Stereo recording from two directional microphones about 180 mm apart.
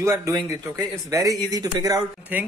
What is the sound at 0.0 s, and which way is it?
A man's voice, 15° right (ahead or behind).